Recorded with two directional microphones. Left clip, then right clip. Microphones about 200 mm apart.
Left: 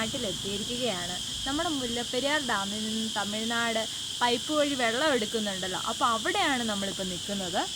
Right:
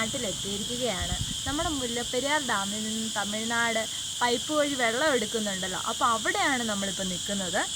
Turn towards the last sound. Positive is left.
turn(degrees=0)  # may be behind; listen again after turning